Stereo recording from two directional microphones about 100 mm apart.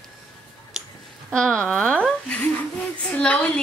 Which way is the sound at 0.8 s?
5° right (ahead or behind).